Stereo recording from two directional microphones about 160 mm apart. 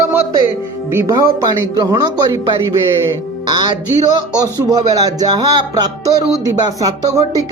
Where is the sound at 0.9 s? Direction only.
20° right (ahead or behind).